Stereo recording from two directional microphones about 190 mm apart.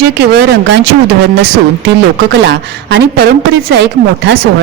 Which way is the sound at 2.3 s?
65° right (ahead or behind).